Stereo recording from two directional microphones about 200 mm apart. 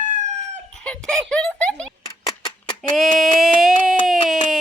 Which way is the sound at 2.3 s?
20° left (ahead or behind).